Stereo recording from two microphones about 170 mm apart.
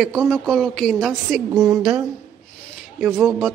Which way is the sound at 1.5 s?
20° right (ahead or behind).